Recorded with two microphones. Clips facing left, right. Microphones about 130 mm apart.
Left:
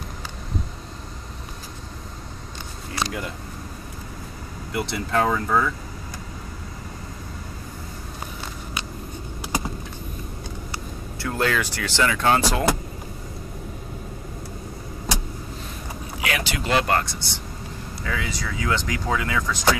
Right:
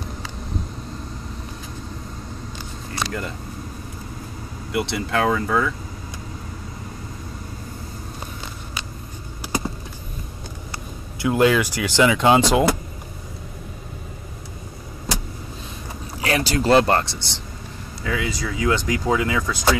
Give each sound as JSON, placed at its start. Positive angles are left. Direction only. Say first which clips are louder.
{"t": 4.7, "sound": "speech", "louder": "right 1 dB", "side_deg": -5}
{"t": 11.2, "sound": "speech", "louder": "right 7 dB", "side_deg": -10}
{"t": 16.2, "sound": "speech", "louder": "right 6 dB", "side_deg": -35}
{"t": 18.0, "sound": "speech", "louder": "right 4 dB", "side_deg": -10}